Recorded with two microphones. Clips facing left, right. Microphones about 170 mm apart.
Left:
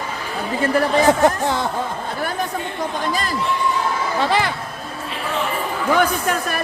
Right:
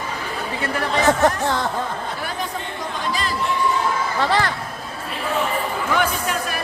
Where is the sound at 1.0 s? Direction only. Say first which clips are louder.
Left 2 dB; 10° left (ahead or behind).